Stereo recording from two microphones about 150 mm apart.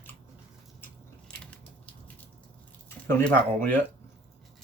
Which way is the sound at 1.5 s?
10° left (ahead or behind).